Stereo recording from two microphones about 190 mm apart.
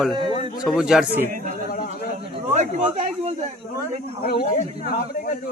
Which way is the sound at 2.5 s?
35° right (ahead or behind).